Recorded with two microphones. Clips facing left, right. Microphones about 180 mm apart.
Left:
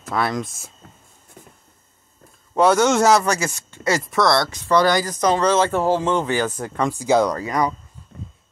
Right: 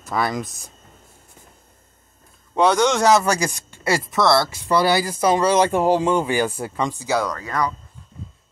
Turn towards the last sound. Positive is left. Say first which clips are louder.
# left 3 dB
turn(degrees=20)  # may be behind; listen again after turning